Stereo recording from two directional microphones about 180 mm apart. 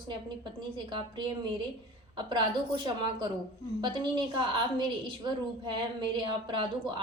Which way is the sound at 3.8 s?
25° right (ahead or behind).